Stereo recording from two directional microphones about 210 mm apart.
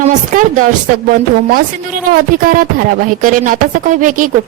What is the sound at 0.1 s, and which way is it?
Speech, 35° right (ahead or behind).